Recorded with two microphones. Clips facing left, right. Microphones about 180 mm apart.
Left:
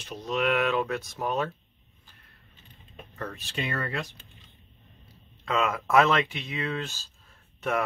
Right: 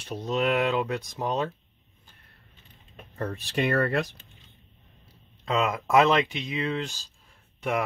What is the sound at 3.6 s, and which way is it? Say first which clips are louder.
Speech: right 8 dB; 60° right (ahead or behind).